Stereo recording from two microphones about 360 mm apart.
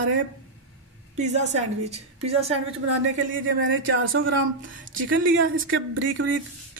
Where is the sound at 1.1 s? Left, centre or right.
Centre.